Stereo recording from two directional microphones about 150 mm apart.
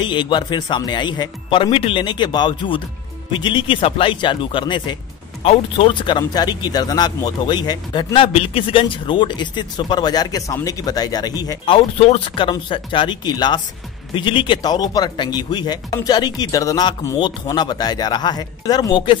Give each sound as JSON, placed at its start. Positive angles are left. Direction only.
{"t": 0.0, "sound": "speech", "side_deg": 30}